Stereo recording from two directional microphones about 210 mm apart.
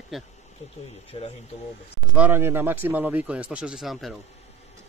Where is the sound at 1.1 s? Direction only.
30° left (ahead or behind).